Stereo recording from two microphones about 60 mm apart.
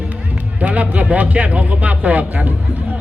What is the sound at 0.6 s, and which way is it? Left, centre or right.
A man's voice, right.